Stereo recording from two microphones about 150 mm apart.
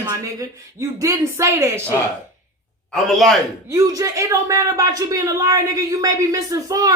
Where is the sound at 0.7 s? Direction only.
20° right (ahead or behind).